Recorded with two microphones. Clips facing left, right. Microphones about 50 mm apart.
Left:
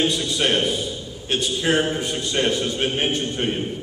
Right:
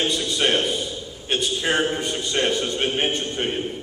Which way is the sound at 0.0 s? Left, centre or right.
Centre.